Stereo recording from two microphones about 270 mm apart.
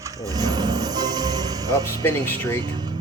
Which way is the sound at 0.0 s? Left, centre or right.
Centre.